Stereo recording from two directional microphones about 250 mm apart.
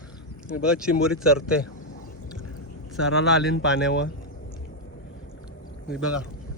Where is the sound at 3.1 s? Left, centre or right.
Left.